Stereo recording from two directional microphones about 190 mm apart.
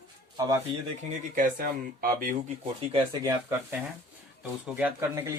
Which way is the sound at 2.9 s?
25° right (ahead or behind).